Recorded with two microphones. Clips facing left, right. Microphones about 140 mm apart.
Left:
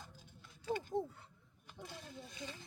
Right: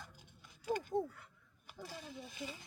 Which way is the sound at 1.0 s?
25° left (ahead or behind).